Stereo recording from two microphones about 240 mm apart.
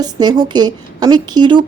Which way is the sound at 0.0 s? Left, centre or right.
Centre.